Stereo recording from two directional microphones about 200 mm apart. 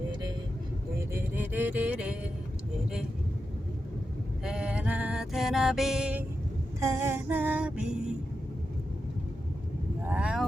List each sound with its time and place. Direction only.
1.1 s music: 10° right (ahead or behind)
4.4 s music: 5° right (ahead or behind)
6.7 s female singing: 15° right (ahead or behind)
10.1 s vehicle: 5° right (ahead or behind)